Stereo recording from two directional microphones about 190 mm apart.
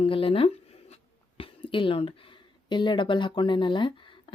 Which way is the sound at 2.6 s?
25° left (ahead or behind).